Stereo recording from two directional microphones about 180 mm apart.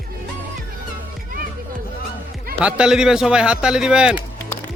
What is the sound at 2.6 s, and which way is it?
Speech, 5° right (ahead or behind).